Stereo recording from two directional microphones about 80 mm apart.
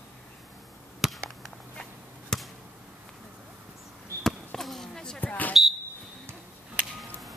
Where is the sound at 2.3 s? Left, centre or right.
Centre.